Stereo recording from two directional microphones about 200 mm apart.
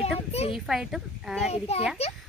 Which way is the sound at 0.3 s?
30° left (ahead or behind).